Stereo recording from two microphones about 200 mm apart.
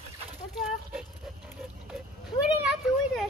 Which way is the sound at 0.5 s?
5° right (ahead or behind).